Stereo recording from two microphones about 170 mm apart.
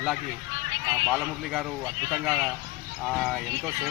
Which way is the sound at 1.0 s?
Centre (ahead or behind).